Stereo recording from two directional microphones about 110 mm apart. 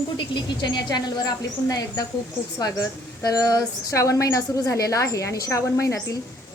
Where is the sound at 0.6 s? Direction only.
40° left (ahead or behind).